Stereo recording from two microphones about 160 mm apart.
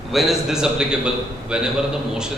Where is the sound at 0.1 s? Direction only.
Centre (ahead or behind).